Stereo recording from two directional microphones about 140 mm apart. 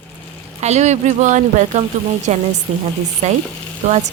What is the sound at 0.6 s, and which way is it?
A woman's voice, 55° right (ahead or behind).